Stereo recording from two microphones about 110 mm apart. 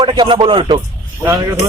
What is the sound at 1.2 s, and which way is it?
Speech, 25° right (ahead or behind).